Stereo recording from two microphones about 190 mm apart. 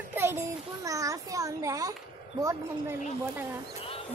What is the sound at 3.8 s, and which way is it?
Music, 30° left (ahead or behind).